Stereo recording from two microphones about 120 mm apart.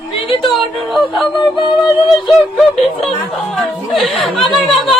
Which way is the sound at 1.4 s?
40° left (ahead or behind).